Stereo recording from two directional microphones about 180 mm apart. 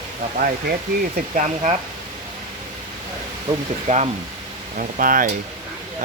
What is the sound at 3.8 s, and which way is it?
Speech, 35° right (ahead or behind).